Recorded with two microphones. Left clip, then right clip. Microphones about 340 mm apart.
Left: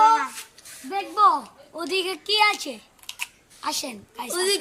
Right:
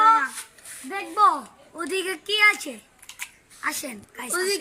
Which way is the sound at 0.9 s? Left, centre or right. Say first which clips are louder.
Left 1 dB; centre.